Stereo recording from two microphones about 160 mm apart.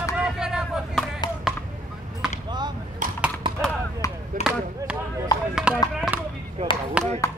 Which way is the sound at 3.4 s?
30° right (ahead or behind).